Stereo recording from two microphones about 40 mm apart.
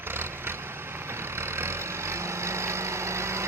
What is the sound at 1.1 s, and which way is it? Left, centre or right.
Vehicle, right.